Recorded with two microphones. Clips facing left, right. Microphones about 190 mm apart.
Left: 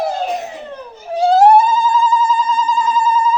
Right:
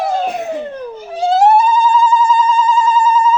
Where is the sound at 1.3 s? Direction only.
40° left (ahead or behind).